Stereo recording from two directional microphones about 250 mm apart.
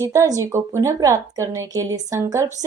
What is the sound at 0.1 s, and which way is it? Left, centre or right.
A woman's voice, centre.